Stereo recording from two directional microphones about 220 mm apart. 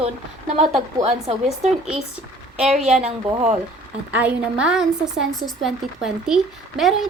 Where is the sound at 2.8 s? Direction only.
5° right (ahead or behind).